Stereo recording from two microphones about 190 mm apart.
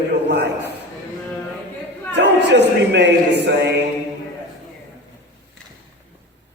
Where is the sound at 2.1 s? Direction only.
65° right (ahead or behind).